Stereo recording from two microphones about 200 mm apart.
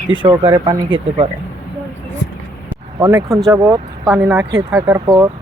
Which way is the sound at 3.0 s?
15° right (ahead or behind).